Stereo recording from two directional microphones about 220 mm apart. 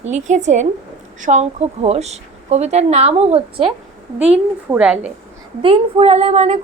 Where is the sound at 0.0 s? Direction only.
30° right (ahead or behind).